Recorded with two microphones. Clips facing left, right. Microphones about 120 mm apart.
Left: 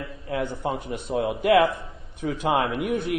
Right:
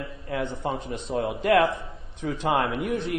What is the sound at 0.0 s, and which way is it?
A man's voice, centre (ahead or behind).